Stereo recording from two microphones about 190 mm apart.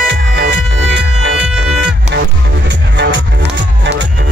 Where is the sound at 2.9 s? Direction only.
65° right (ahead or behind).